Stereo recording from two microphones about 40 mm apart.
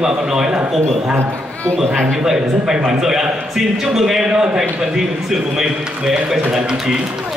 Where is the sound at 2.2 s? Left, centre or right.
Centre.